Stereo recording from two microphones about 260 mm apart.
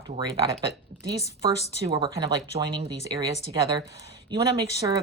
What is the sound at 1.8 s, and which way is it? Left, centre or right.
Speech, centre.